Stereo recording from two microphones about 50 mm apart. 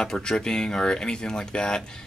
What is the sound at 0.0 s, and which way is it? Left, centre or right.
Speech, centre.